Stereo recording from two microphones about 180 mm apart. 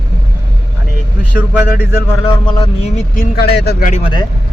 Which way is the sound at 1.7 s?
50° left (ahead or behind).